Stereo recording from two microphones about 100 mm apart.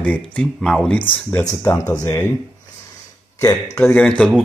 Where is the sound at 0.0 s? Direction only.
15° left (ahead or behind).